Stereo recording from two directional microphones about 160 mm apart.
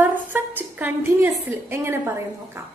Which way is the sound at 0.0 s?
10° right (ahead or behind).